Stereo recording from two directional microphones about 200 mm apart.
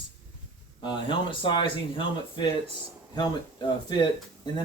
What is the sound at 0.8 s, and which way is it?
Speech, 25° left (ahead or behind).